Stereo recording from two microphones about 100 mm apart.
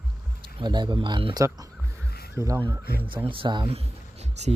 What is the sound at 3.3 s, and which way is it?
Speech, 55° right (ahead or behind).